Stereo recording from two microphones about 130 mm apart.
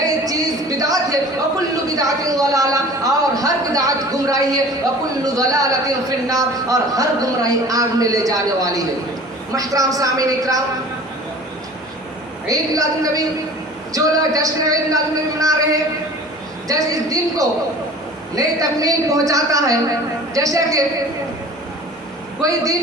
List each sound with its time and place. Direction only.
0.0 s a sound: 25° right (ahead or behind)
5.2 s a man's voice: 25° right (ahead or behind)
12.5 s a man's voice: 25° right (ahead or behind)
22.4 s a man's voice: 25° right (ahead or behind)